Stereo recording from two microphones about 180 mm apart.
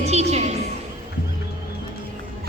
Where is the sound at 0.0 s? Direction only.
35° right (ahead or behind).